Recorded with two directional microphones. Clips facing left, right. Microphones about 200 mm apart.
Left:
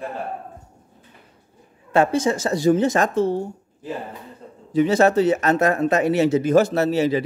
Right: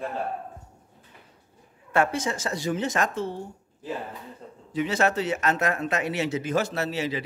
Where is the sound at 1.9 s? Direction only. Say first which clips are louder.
Left 6 dB; 30° left (ahead or behind).